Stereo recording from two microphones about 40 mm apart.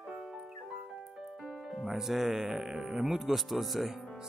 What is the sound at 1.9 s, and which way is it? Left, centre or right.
Speech, centre.